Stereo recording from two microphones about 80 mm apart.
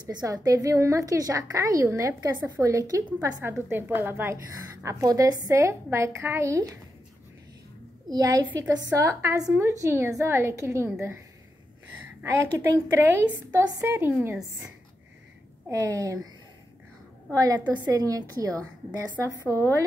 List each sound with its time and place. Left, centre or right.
0.1 s a woman's voice: right
3.7 s a woman's voice: right
4.8 s a woman's voice: right
8.1 s a woman's voice: right
8.5 s a woman's voice: right
12.5 s a woman's voice: right
15.7 s a woman's voice: right
17.3 s a woman's voice: right